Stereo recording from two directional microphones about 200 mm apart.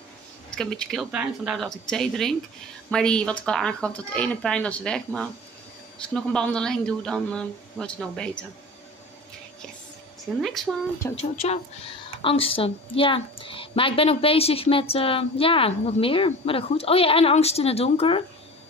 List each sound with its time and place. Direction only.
0.5 s speech: 5° left (ahead or behind)
10.4 s speech: centre (ahead or behind)
11.1 s a woman's voice: 30° left (ahead or behind)